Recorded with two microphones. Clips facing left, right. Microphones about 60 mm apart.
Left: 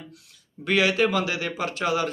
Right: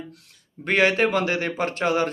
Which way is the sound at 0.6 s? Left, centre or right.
Right.